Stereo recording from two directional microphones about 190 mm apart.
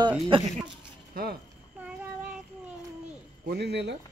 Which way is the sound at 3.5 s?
60° right (ahead or behind).